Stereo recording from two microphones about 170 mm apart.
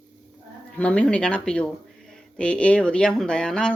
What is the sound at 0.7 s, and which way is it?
Speech, 5° left (ahead or behind).